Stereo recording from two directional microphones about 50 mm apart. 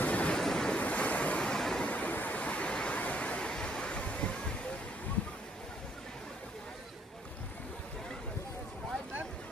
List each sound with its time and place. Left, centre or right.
0.0 s waves: left
0.3 s waves: centre
0.7 s waves: left
1.4 s vehicle: centre
1.8 s waves: left